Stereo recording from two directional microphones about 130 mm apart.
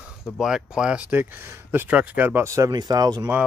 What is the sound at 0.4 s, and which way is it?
Speech, 5° right (ahead or behind).